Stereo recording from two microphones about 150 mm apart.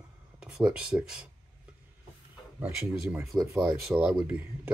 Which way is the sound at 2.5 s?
10° right (ahead or behind).